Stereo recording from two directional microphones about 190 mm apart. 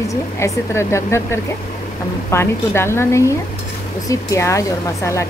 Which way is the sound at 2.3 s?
15° left (ahead or behind).